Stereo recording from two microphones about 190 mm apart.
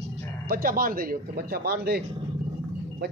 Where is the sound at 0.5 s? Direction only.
50° right (ahead or behind).